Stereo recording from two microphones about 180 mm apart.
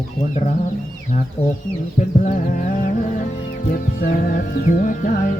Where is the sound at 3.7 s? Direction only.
55° left (ahead or behind).